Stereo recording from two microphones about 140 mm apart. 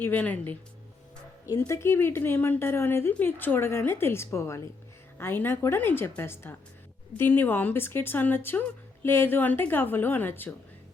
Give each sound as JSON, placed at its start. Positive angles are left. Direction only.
{"t": 0.0, "sound": "a woman's voice", "side_deg": 10}